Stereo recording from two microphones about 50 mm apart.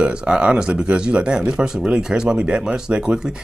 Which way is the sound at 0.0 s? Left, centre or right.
Centre.